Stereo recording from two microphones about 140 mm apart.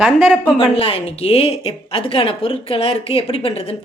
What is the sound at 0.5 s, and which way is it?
A woman's voice, 45° left (ahead or behind).